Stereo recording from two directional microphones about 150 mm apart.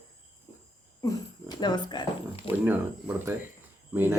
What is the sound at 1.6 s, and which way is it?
Speech, 30° left (ahead or behind).